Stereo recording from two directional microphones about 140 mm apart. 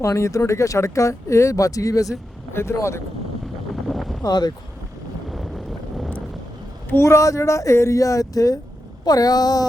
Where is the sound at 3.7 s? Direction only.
Centre (ahead or behind).